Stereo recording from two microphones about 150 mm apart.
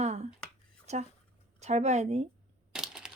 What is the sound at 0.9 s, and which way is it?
Speech, 50° right (ahead or behind).